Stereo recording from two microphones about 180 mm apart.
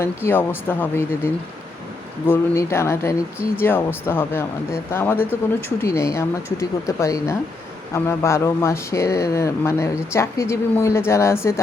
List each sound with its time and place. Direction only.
0.0 s speech: 15° left (ahead or behind)